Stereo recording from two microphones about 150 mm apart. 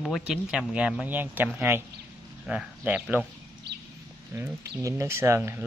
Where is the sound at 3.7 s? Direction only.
90° right.